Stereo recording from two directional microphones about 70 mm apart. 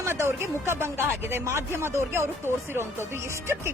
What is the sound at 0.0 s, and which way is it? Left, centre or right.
A woman's voice, right.